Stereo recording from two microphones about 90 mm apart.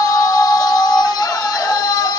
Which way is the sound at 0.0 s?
40° left (ahead or behind).